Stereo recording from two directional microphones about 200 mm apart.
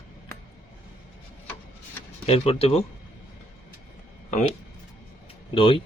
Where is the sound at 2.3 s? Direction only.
30° left (ahead or behind).